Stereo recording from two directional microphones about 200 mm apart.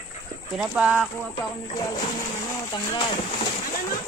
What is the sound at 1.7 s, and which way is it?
Speech, 20° left (ahead or behind).